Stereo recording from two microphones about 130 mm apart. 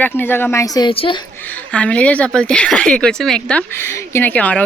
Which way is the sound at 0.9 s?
40° left (ahead or behind).